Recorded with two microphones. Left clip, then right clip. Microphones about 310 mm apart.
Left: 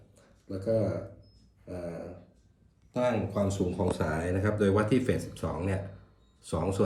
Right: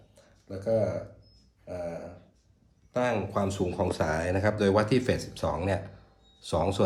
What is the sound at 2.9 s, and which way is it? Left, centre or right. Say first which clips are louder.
Speech: right 1 dB; centre.